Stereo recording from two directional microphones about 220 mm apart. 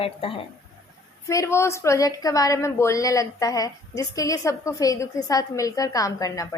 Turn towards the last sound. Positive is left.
turn(degrees=15)  # may be behind; listen again after turning